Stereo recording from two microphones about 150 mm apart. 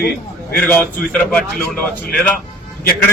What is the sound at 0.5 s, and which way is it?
A man's voice, 10° left (ahead or behind).